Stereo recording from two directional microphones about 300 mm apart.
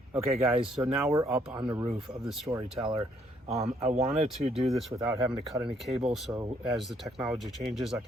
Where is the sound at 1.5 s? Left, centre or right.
Centre.